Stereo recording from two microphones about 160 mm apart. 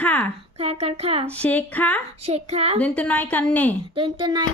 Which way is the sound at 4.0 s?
35° right (ahead or behind).